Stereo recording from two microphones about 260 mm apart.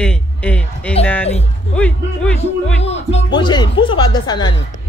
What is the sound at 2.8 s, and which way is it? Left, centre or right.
Music, left.